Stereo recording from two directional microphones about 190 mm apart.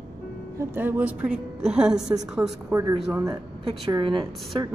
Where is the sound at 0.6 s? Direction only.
10° right (ahead or behind).